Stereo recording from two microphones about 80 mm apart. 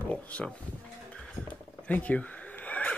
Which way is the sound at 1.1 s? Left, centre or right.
Centre.